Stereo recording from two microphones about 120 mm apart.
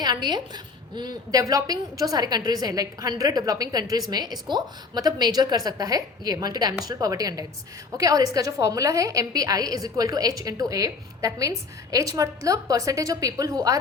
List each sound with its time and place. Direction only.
0.0 s a woman's voice: 35° right (ahead or behind)